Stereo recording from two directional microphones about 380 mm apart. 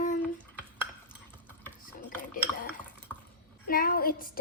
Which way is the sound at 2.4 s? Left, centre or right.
Centre.